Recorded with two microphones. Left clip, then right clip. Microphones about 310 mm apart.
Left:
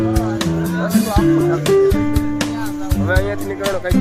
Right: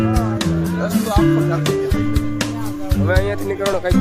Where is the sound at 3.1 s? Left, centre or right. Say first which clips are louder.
Even; centre.